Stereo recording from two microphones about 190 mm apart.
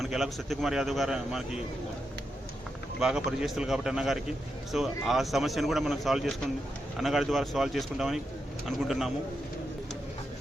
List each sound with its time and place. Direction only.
0.0 s a man's voice: centre (ahead or behind)
3.0 s a man's voice: centre (ahead or behind)